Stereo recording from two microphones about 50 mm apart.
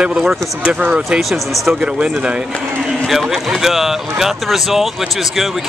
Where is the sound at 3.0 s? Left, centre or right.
Centre.